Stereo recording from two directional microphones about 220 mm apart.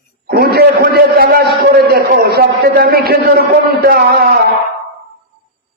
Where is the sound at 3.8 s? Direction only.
45° right (ahead or behind).